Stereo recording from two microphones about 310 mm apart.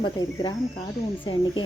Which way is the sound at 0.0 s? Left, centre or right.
Centre.